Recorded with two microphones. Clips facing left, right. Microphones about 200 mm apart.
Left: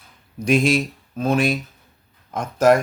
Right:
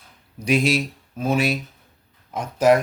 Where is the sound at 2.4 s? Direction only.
45° left (ahead or behind).